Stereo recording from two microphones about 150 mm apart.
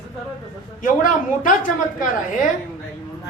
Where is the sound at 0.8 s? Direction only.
65° left (ahead or behind).